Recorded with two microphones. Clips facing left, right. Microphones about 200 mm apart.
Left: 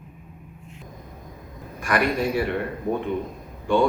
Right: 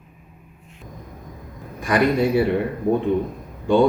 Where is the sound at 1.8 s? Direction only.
20° right (ahead or behind).